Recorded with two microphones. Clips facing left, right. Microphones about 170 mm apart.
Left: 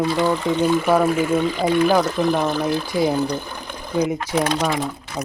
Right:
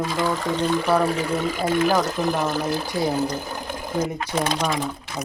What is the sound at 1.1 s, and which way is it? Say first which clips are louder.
Speech: left 5 dB; 35° right (ahead or behind).